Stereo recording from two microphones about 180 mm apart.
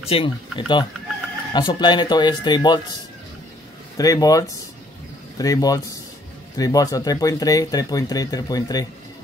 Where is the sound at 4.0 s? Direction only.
20° left (ahead or behind).